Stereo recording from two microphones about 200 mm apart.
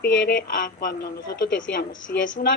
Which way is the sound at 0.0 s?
60° left (ahead or behind).